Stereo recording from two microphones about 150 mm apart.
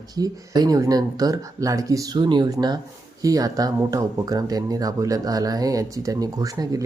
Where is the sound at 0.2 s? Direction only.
25° right (ahead or behind).